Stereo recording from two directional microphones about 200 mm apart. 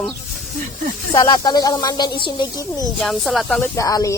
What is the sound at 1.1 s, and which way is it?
Speech, 20° left (ahead or behind).